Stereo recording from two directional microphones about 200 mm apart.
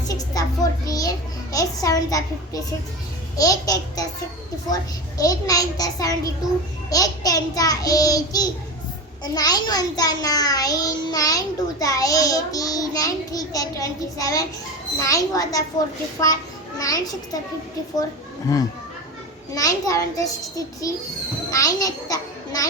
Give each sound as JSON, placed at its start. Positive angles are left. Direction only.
{"t": 0.1, "sound": "music", "side_deg": 20}
{"t": 0.9, "sound": "a child's voice", "side_deg": 20}
{"t": 18.5, "sound": "a child's voice", "side_deg": 15}